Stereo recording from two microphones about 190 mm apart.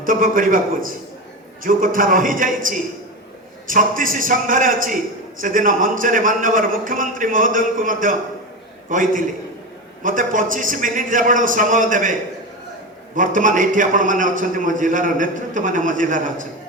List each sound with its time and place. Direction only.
0.0 s a man's voice: 45° right (ahead or behind)
13.1 s a man's voice: 45° right (ahead or behind)